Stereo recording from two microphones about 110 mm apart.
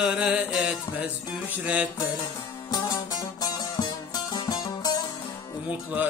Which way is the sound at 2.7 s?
35° left (ahead or behind).